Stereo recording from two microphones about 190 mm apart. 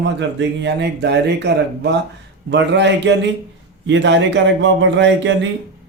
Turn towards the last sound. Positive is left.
turn(degrees=-75)  # may be behind; listen again after turning